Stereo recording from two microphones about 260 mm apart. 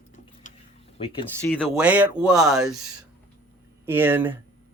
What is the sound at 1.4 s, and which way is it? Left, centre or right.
Speech, centre.